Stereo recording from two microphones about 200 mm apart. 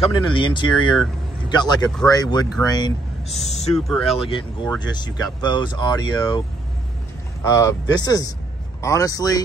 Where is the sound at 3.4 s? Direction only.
35° left (ahead or behind).